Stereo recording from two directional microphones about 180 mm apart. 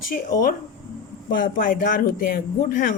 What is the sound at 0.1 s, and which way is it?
Speech, 50° left (ahead or behind).